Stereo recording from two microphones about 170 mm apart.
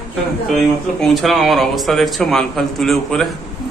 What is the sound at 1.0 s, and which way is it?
A man's voice, centre (ahead or behind).